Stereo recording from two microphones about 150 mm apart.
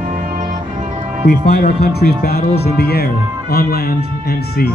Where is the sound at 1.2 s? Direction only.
90° left.